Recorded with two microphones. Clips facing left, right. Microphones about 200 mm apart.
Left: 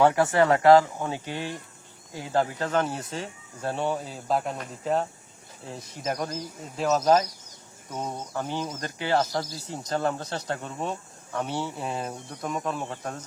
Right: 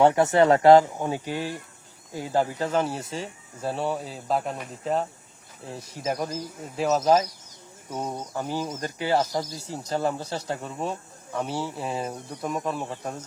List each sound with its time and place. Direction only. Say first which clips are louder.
0.0 s speech: right 2 dB; 20° right (ahead or behind); by 13.1 s centre (ahead or behind)